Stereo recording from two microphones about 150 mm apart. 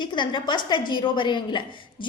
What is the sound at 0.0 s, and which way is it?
A woman's voice, 30° left (ahead or behind).